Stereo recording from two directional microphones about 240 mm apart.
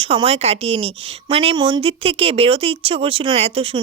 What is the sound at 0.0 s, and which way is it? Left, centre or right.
A woman's voice, right.